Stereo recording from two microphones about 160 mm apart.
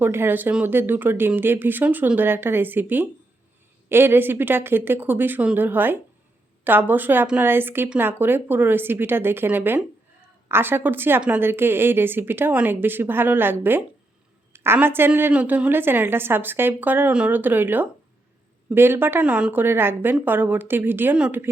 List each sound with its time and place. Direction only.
0.0 s speech: 15° right (ahead or behind)